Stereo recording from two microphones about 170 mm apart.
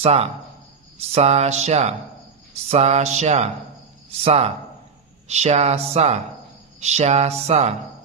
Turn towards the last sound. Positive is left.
turn(degrees=-40)  # may be behind; listen again after turning